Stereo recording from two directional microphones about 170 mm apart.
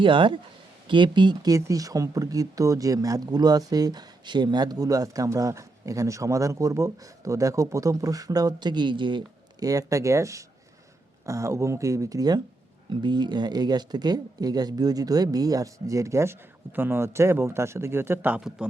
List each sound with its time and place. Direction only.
0.0 s speech: 30° right (ahead or behind); by 18.7 s 5° right (ahead or behind)